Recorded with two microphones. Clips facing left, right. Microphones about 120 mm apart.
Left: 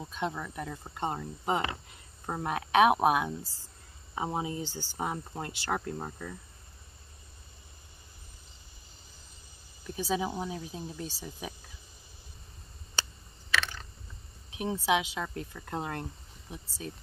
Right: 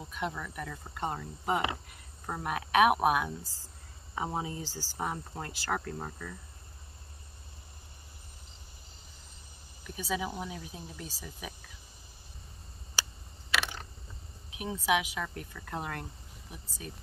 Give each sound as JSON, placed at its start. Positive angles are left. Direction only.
{"t": 0.1, "sound": "speech", "side_deg": 30}
{"t": 9.8, "sound": "speech", "side_deg": 30}
{"t": 13.6, "sound": "a sound", "side_deg": -15}
{"t": 14.5, "sound": "speech", "side_deg": 30}